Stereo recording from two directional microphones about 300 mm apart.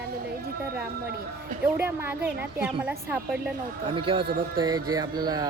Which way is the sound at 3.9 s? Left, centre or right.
Centre.